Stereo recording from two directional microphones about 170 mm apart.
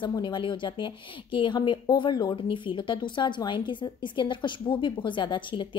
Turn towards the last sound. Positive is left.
turn(degrees=30)  # may be behind; listen again after turning